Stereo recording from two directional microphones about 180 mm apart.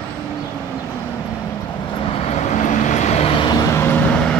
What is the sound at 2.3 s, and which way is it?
Vehicle, 40° left (ahead or behind).